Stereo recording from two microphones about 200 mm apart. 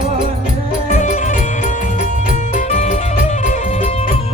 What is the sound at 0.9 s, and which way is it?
Music, 35° left (ahead or behind).